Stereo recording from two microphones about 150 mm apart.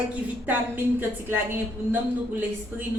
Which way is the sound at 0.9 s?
15° right (ahead or behind).